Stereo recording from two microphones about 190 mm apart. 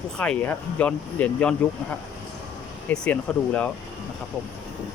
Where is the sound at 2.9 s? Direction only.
10° left (ahead or behind).